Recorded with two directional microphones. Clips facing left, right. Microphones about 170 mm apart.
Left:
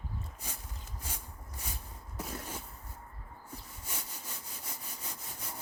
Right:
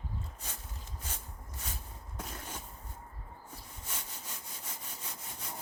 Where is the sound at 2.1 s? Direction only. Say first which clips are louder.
Left 3 dB; 10° left (ahead or behind).